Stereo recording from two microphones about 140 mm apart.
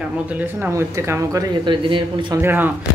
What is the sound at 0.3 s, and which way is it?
Speech, 15° right (ahead or behind).